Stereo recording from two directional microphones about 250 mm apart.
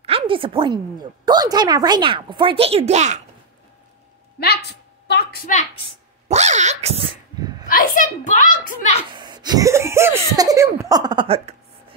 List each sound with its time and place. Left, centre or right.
0.0 s a woman's voice: right
4.4 s a sound: left
6.2 s dog: right
7.6 s a child's voice: left
9.1 s laughter: centre